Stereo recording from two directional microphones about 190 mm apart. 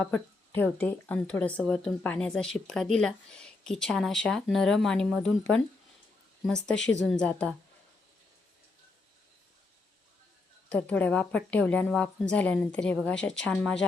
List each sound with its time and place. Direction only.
0.0 s speech: 10° left (ahead or behind)
6.7 s a woman's voice: 75° left (ahead or behind)
7.1 s speech: 5° left (ahead or behind)
10.7 s speech: 5° left (ahead or behind)